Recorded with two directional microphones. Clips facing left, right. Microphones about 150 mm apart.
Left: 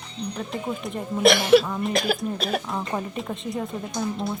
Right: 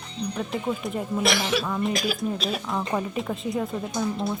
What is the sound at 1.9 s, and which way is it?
Speech, 60° left (ahead or behind).